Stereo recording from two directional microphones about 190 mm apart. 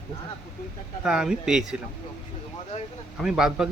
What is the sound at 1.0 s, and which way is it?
Speech, 5° right (ahead or behind).